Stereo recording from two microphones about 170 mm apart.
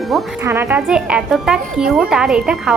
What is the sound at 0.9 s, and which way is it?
Speech, 5° right (ahead or behind).